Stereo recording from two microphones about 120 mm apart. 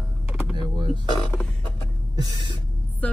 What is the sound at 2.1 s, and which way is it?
Speech, 35° right (ahead or behind).